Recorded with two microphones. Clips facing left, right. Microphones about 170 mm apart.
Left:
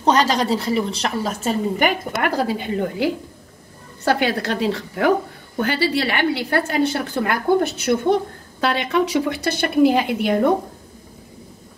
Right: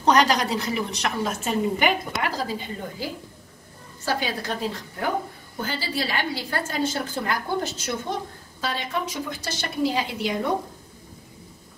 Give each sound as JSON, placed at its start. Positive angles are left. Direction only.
{"t": 0.0, "sound": "a woman's voice", "side_deg": 30}
{"t": 5.6, "sound": "a woman's voice", "side_deg": 70}